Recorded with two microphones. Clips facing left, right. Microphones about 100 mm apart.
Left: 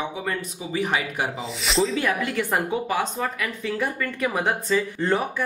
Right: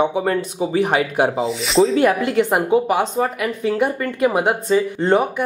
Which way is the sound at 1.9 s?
40° right (ahead or behind).